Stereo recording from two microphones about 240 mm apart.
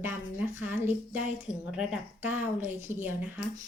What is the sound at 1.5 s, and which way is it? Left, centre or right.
A woman's voice, centre.